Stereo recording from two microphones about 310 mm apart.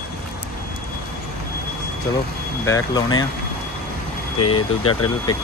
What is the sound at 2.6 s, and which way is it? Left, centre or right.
Speech, centre.